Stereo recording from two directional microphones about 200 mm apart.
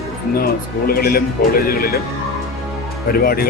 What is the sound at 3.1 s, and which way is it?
Speech, 50° left (ahead or behind).